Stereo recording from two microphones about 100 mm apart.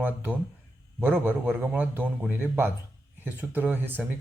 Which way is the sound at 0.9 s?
20° right (ahead or behind).